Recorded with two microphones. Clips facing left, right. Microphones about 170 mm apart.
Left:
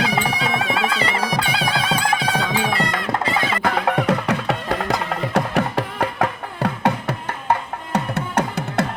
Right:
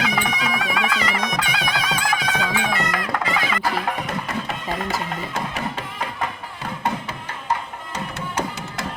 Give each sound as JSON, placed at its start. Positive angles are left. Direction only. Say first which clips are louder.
{"t": 0.0, "sound": "music", "louder": "left 2 dB", "side_deg": 30}
{"t": 3.6, "sound": "music", "louder": "left 5 dB", "side_deg": 60}